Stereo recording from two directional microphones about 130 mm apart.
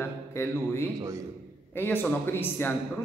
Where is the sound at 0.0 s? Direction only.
20° left (ahead or behind).